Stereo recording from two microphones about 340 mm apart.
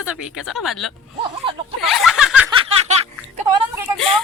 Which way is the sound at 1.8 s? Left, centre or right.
Centre.